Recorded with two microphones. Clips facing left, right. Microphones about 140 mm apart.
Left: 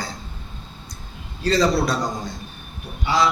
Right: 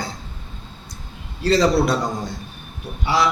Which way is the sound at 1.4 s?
30° right (ahead or behind).